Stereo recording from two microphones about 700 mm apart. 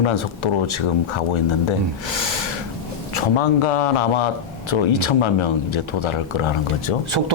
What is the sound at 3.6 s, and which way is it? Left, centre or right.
Speech, left.